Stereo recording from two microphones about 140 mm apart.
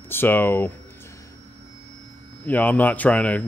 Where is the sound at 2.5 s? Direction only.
10° left (ahead or behind).